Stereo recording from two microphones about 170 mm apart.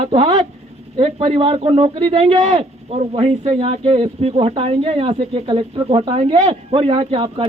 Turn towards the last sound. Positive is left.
turn(degrees=-30)  # may be behind; listen again after turning